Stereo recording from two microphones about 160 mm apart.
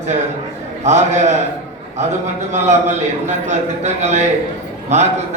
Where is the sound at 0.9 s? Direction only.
45° right (ahead or behind).